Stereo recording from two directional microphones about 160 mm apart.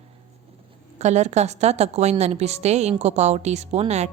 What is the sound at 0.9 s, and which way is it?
A woman's voice, 45° right (ahead or behind).